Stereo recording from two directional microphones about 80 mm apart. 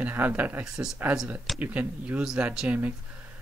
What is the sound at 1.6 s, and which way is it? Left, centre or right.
Speech, centre.